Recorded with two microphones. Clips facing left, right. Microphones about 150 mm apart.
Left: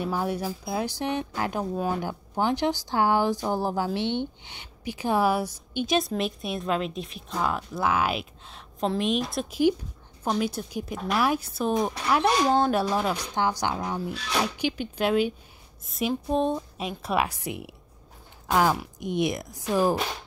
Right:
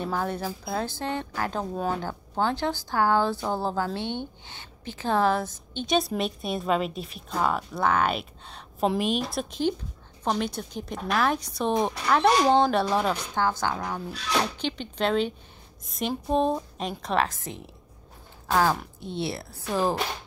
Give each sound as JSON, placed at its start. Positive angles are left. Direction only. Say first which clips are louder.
{"t": 0.0, "sound": "speech", "louder": "left 1 dB", "side_deg": 10}
{"t": 5.9, "sound": "speech", "louder": "right 2 dB", "side_deg": 0}
{"t": 13.3, "sound": "speech", "louder": "even", "side_deg": 15}